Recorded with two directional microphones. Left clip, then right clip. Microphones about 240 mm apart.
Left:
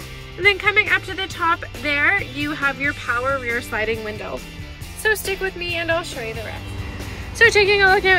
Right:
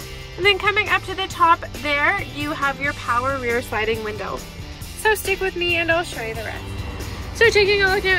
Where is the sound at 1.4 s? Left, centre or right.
Left.